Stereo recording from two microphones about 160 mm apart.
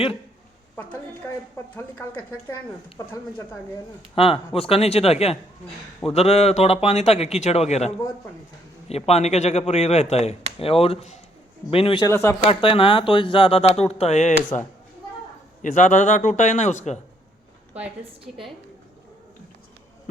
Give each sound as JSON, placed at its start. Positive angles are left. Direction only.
{"t": 1.5, "sound": "speech", "side_deg": 10}
{"t": 4.1, "sound": "a man's voice", "side_deg": 35}
{"t": 12.0, "sound": "speech", "side_deg": 15}
{"t": 12.5, "sound": "a man's voice", "side_deg": 35}
{"t": 15.6, "sound": "a man's voice", "side_deg": 50}